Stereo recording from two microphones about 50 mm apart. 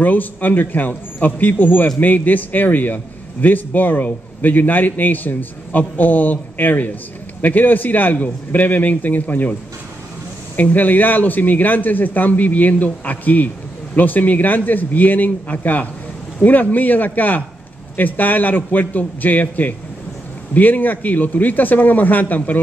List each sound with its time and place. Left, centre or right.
0.0 s a man's voice: left